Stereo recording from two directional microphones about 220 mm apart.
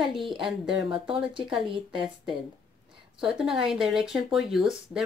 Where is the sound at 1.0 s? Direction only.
25° right (ahead or behind).